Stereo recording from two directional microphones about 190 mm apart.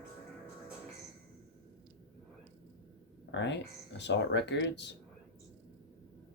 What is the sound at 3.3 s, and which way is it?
Speech, 70° left (ahead or behind).